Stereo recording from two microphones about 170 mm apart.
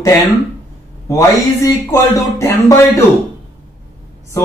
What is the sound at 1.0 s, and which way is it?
Speech, 15° left (ahead or behind).